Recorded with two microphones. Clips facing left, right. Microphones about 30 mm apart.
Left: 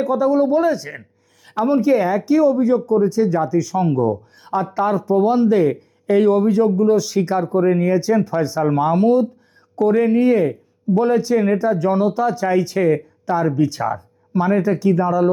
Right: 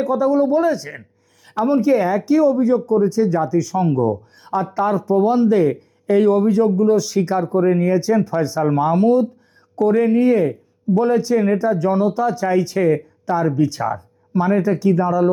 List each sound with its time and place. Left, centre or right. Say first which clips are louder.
0.0 s speech: even; centre
12.3 s speech: even; centre